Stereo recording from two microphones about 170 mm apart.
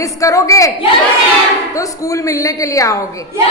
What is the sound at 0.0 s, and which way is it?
Speech, 20° left (ahead or behind).